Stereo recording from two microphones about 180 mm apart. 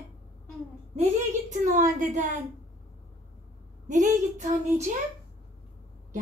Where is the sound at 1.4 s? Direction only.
45° right (ahead or behind).